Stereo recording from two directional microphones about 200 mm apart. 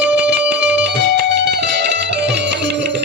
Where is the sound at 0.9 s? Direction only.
55° right (ahead or behind).